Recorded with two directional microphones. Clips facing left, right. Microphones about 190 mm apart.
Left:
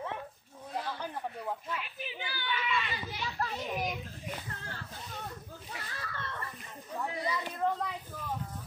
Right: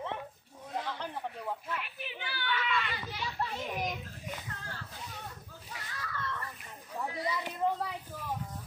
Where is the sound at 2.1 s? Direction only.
60° right (ahead or behind).